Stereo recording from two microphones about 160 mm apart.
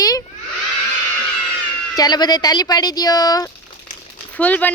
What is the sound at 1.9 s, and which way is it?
Speech, 25° left (ahead or behind).